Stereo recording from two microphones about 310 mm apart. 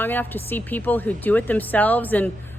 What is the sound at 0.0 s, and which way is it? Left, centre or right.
A woman's voice, centre.